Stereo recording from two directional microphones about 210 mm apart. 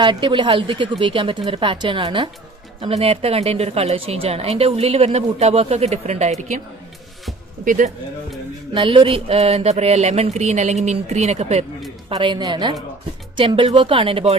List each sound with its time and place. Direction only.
0.0 s a woman's voice: 20° right (ahead or behind)
7.6 s speech: 40° right (ahead or behind)
8.7 s speech: 25° right (ahead or behind)
12.1 s a woman's voice: 20° right (ahead or behind)